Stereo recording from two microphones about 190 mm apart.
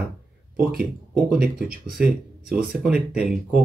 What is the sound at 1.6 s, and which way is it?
Speech, 50° right (ahead or behind).